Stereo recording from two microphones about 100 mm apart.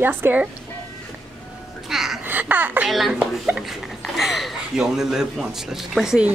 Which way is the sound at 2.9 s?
5° right (ahead or behind).